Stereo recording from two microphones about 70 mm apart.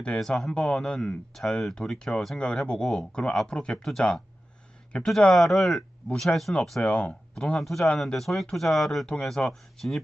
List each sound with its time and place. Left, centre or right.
0.0 s speech: centre
6.8 s speech: centre